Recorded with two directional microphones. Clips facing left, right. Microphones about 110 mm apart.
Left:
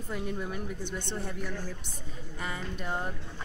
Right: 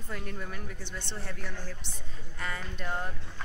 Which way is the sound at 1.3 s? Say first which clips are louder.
Left 4 dB; 15° left (ahead or behind).